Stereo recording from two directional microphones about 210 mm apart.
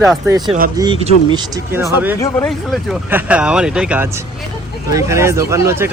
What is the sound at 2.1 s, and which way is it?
Speech, 10° left (ahead or behind).